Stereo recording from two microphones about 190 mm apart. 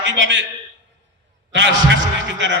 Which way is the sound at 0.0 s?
70° right (ahead or behind).